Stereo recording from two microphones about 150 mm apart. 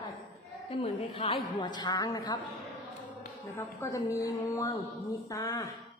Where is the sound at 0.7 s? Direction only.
40° left (ahead or behind).